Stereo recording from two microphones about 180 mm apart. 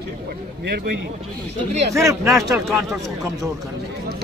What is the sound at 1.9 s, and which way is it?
Speech, 15° right (ahead or behind).